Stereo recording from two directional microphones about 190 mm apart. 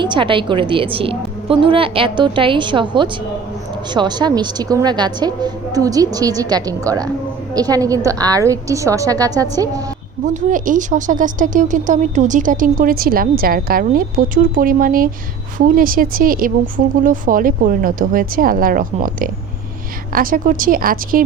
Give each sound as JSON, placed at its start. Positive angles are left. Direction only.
{"t": 0.0, "sound": "a woman's voice", "side_deg": -25}
{"t": 10.2, "sound": "speech", "side_deg": -45}